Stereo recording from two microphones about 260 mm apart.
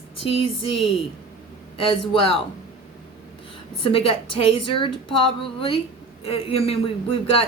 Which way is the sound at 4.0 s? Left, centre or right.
Left.